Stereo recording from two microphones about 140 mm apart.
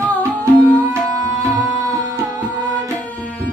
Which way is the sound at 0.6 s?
10° right (ahead or behind).